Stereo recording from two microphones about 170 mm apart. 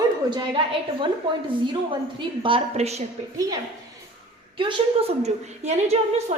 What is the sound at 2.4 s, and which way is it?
Speech, 35° right (ahead or behind).